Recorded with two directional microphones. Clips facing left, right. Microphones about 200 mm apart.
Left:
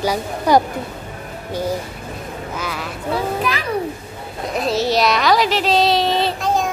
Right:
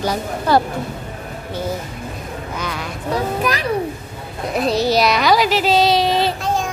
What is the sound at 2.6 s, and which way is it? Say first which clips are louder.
Speech: right 1 dB; 5° left (ahead or behind).